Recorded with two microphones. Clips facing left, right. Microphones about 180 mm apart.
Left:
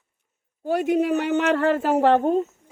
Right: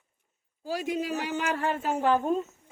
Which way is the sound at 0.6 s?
60° left (ahead or behind).